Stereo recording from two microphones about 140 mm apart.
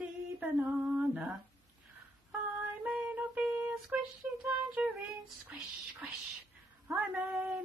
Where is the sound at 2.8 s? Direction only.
10° right (ahead or behind).